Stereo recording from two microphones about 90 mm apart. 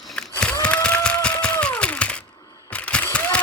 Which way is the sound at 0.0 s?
5° left (ahead or behind).